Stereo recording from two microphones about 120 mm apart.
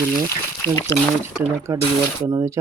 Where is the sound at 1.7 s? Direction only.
20° right (ahead or behind).